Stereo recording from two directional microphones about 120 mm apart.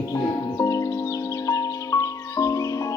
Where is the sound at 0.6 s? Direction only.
25° left (ahead or behind).